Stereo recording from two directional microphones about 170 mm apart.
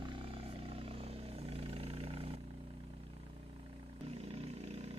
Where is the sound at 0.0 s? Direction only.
30° right (ahead or behind).